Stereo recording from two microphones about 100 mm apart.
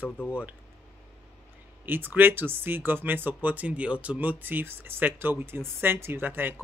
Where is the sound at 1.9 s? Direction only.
20° right (ahead or behind).